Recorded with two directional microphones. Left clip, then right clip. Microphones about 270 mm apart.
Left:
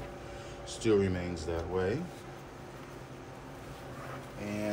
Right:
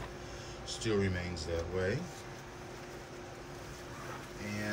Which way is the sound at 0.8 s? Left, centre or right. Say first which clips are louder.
Left 6 dB; centre.